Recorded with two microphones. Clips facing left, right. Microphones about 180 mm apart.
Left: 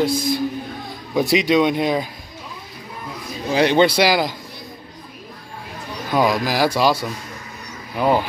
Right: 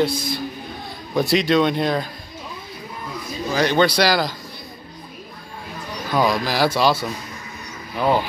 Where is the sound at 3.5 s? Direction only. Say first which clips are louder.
Left 3 dB; 25° left (ahead or behind).